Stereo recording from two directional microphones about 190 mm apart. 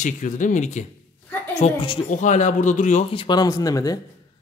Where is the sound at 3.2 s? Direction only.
20° left (ahead or behind).